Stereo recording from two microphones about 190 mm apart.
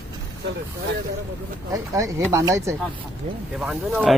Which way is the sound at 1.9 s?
15° right (ahead or behind).